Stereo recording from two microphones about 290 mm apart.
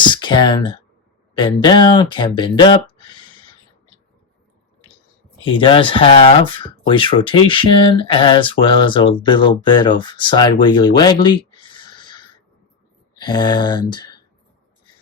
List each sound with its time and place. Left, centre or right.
0.0 s a sound: centre
1.6 s speech: centre
5.5 s speech: centre